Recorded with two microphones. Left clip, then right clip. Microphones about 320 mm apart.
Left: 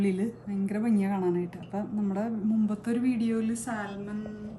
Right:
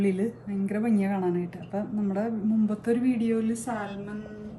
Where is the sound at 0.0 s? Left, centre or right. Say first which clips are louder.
Right 3 dB; centre.